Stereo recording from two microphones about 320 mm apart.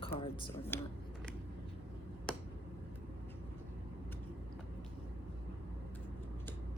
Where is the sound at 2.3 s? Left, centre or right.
Centre.